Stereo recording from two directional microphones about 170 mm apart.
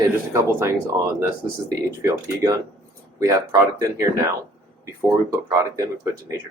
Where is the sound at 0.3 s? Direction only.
15° right (ahead or behind).